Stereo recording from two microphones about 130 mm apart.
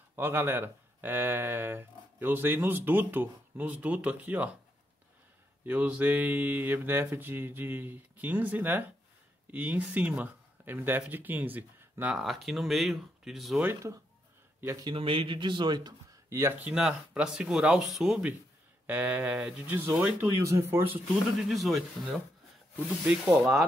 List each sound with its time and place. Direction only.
0.1 s speech: 15° right (ahead or behind)
5.7 s speech: 15° right (ahead or behind)
12.2 s speech: centre (ahead or behind)
13.6 s speech: 15° right (ahead or behind)
15.0 s speech: 40° right (ahead or behind)
16.3 s speech: 20° right (ahead or behind)
21.4 s speech: centre (ahead or behind)